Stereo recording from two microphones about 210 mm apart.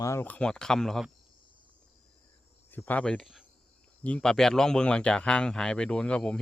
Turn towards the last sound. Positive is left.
turn(degrees=5)  # may be behind; listen again after turning